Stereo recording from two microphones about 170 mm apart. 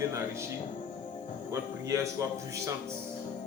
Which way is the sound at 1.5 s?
20° right (ahead or behind).